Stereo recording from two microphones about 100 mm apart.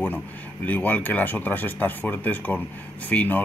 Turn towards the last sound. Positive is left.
turn(degrees=15)  # may be behind; listen again after turning